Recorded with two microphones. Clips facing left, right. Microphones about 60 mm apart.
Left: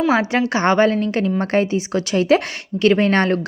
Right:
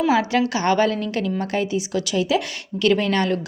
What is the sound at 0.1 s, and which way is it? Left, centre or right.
Speech, left.